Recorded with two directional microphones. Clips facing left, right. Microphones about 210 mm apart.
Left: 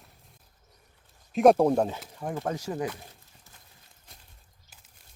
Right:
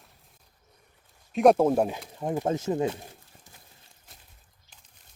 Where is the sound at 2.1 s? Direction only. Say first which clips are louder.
Right 4 dB; 20° right (ahead or behind).